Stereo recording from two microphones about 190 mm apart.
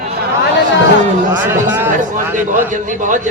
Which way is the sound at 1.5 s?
10° right (ahead or behind).